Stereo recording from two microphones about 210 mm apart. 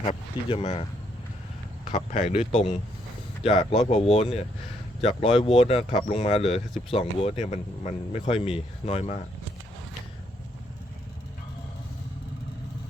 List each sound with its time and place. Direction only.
0.0 s speech: 30° left (ahead or behind)
1.9 s speech: 35° left (ahead or behind)